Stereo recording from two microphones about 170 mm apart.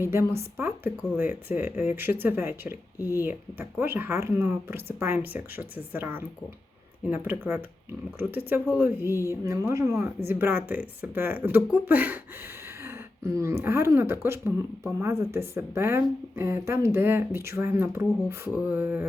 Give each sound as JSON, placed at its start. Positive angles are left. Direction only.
{"t": 0.0, "sound": "speech", "side_deg": -15}
{"t": 9.1, "sound": "speech", "side_deg": 20}
{"t": 9.4, "sound": "speech", "side_deg": -15}